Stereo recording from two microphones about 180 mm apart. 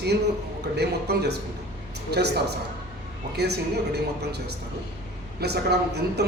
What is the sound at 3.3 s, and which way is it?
Speech, 65° right (ahead or behind).